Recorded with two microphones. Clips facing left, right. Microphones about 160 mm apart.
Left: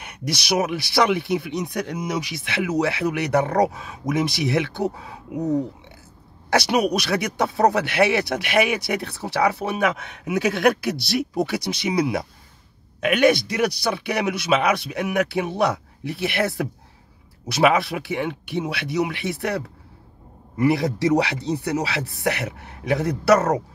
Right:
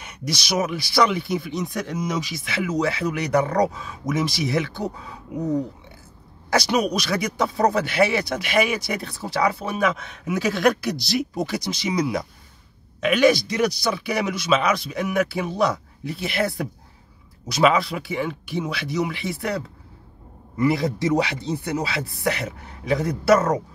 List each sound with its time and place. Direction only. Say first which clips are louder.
0.0 s speech: left 1 dB; 55° left (ahead or behind)
4.8 s speech: left 3 dB; 5° left (ahead or behind)
6.5 s speech: left 1 dB; 60° left (ahead or behind)
20.7 s speech: left 2 dB; 65° left (ahead or behind)